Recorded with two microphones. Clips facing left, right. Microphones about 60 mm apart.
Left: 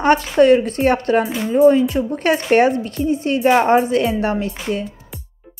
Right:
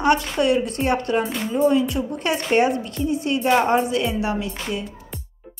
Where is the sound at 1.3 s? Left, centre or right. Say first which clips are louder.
Left 6 dB; centre.